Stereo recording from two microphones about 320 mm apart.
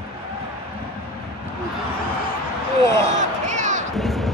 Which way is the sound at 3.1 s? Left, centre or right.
Right.